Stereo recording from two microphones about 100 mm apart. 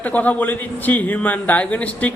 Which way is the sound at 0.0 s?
15° left (ahead or behind).